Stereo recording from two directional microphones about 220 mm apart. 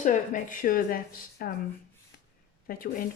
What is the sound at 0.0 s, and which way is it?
A woman's voice, 35° left (ahead or behind).